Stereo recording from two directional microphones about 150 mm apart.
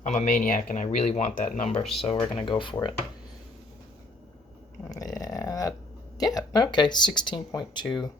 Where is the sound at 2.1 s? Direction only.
30° left (ahead or behind).